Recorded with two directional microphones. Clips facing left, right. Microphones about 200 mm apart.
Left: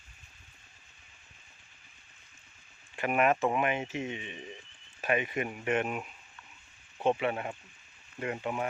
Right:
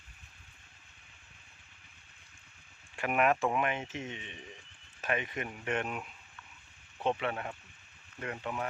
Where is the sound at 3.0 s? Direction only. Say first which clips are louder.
Left 2 dB; centre (ahead or behind).